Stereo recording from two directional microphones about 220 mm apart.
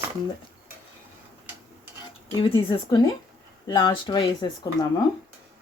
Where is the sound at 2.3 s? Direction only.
25° left (ahead or behind).